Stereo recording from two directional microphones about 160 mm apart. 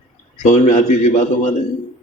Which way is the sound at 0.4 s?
45° left (ahead or behind).